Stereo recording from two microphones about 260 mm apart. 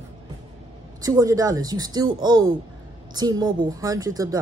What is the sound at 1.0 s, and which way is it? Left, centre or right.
Speech, centre.